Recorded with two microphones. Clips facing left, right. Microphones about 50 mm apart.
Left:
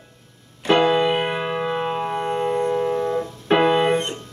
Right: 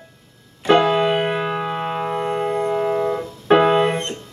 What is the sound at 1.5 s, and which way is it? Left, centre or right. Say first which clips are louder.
Music: even; centre.